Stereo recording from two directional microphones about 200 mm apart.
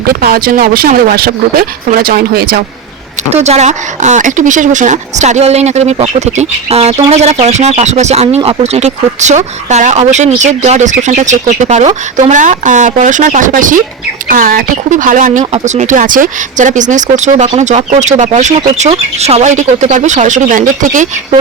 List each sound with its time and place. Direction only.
0.1 s speech: 50° right (ahead or behind)
3.2 s speech: 35° right (ahead or behind)